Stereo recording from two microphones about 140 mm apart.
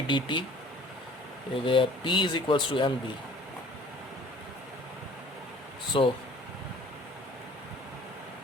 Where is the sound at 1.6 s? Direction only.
40° left (ahead or behind).